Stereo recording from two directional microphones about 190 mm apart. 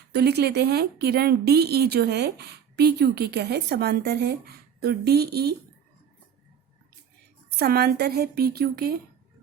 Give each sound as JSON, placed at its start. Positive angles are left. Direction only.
{"t": 0.1, "sound": "speech", "side_deg": -60}
{"t": 7.5, "sound": "speech", "side_deg": -55}